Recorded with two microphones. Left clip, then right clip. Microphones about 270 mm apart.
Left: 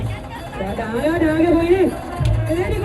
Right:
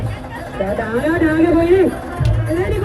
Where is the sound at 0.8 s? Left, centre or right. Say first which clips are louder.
Right 1 dB; left.